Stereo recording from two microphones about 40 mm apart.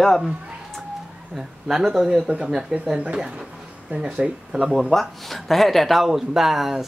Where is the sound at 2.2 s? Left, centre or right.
Right.